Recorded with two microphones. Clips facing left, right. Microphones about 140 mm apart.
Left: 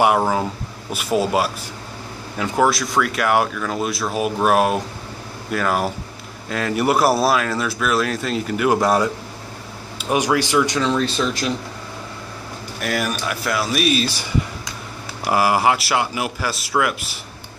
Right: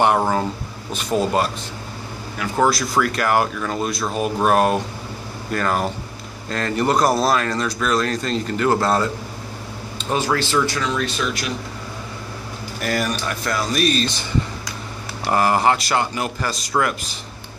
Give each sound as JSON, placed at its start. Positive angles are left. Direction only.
{"t": 0.0, "sound": "speech", "side_deg": 5}
{"t": 2.5, "sound": "speech", "side_deg": 0}
{"t": 10.8, "sound": "speech", "side_deg": 30}
{"t": 12.8, "sound": "speech", "side_deg": 0}
{"t": 15.2, "sound": "speech", "side_deg": 5}